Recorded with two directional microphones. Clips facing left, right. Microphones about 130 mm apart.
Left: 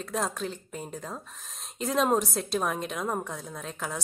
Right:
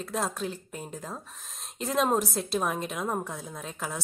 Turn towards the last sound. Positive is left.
turn(degrees=0)  # may be behind; listen again after turning